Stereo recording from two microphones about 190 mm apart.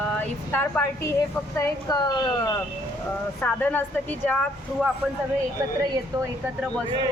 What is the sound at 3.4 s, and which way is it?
Speech, 10° left (ahead or behind).